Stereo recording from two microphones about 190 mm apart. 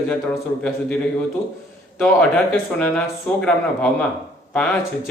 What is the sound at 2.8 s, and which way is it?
Speech, 5° left (ahead or behind).